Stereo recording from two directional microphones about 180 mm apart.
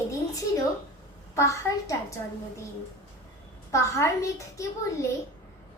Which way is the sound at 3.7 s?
15° left (ahead or behind).